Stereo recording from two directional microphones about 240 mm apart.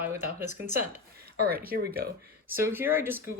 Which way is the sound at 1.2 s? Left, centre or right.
Right.